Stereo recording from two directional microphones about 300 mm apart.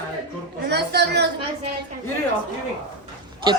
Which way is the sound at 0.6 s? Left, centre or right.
Right.